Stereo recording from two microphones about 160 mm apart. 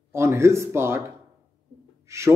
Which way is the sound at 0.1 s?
15° right (ahead or behind).